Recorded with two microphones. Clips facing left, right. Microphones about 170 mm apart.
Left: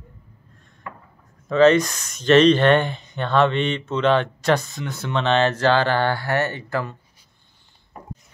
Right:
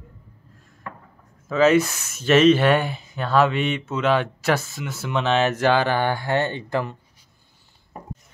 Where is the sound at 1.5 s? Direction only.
5° right (ahead or behind).